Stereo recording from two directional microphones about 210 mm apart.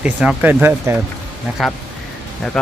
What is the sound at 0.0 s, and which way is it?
Speech, 5° right (ahead or behind).